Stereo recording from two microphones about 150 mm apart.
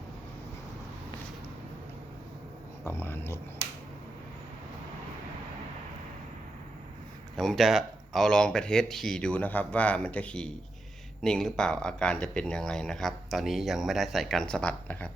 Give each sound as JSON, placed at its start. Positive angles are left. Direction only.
{"t": 2.8, "sound": "speech", "side_deg": 15}
{"t": 7.3, "sound": "speech", "side_deg": 0}